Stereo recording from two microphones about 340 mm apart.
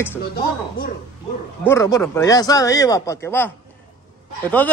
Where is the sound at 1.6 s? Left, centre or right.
Centre.